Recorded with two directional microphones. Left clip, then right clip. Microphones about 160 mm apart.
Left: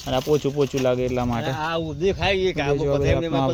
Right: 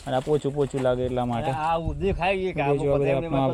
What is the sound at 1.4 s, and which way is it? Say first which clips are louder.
Speech: even; 85° left.